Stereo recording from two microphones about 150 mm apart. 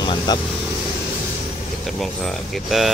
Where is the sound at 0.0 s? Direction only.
30° left (ahead or behind).